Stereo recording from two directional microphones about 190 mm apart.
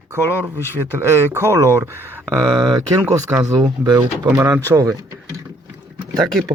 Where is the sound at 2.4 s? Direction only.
25° right (ahead or behind).